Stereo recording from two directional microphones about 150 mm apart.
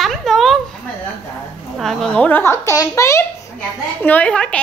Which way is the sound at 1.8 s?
Centre (ahead or behind).